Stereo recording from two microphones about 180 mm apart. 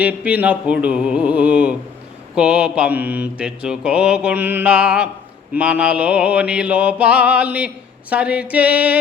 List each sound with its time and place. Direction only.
0.0 s mantra: 5° right (ahead or behind)